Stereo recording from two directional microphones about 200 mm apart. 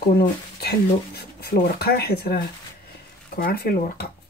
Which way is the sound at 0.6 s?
50° left (ahead or behind).